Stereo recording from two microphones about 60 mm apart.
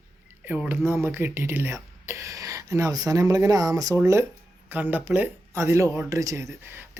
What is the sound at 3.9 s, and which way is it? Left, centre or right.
Speech, right.